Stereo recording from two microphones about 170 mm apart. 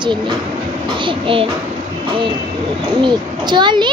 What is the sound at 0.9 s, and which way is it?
Speech, 30° right (ahead or behind).